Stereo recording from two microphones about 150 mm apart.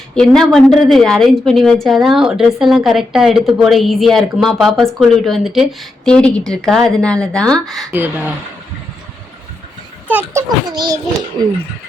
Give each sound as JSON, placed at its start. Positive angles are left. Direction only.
{"t": 0.2, "sound": "a woman's voice", "side_deg": 0}
{"t": 7.9, "sound": "speech", "side_deg": -15}
{"t": 10.1, "sound": "speech", "side_deg": -10}
{"t": 10.7, "sound": "a child's voice", "side_deg": -25}